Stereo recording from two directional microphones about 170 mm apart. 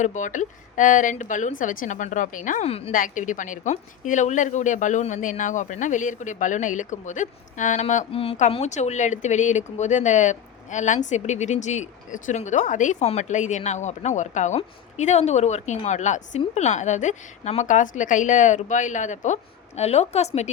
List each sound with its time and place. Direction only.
0.0 s a woman's voice: 45° left (ahead or behind)
2.9 s a woman's voice: 50° left (ahead or behind)